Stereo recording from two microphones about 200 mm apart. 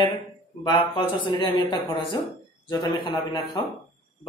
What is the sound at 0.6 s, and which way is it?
A man's voice, 25° left (ahead or behind).